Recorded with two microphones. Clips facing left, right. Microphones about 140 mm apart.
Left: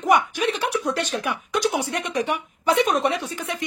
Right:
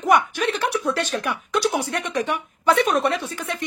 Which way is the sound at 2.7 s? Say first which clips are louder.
Even; 15° left (ahead or behind).